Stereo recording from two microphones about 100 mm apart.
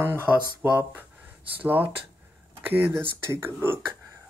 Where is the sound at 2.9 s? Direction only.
25° right (ahead or behind).